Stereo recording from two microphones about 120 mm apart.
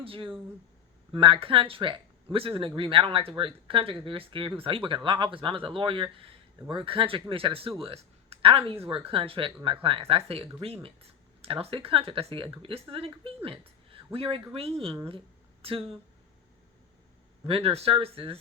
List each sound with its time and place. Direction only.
0.0 s speech: 50° right (ahead or behind)
17.4 s speech: 55° right (ahead or behind)